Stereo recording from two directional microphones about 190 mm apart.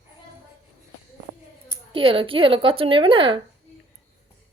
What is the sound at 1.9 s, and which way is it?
A woman's voice, 30° right (ahead or behind).